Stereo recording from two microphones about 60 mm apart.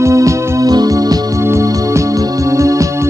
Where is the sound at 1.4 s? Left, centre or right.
Right.